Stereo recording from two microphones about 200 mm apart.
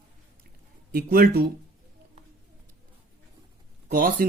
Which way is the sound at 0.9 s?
50° right (ahead or behind).